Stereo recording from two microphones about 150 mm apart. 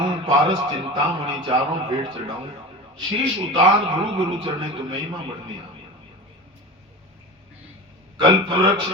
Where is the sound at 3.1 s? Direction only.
30° right (ahead or behind).